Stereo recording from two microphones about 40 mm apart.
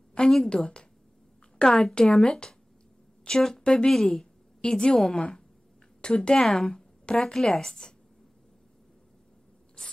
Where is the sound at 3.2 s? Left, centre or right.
Centre.